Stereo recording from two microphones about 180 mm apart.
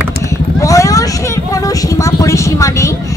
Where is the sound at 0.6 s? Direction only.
20° left (ahead or behind).